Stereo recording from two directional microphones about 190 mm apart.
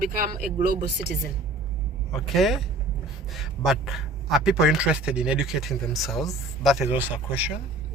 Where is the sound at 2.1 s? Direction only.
Centre (ahead or behind).